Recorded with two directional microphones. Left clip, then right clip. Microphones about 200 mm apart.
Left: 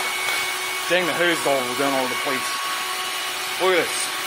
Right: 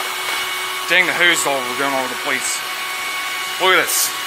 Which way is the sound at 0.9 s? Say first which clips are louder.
Right 6 dB; 15° left (ahead or behind).